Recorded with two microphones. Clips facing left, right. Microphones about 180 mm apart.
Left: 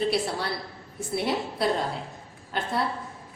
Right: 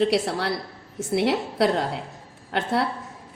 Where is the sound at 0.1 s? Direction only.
75° right (ahead or behind).